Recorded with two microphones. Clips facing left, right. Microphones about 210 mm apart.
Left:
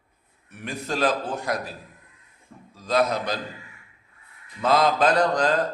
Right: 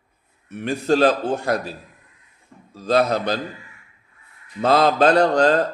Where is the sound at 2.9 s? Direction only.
30° right (ahead or behind).